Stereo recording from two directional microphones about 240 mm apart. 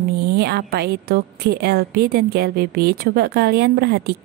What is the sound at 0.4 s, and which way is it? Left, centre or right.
A woman's voice, right.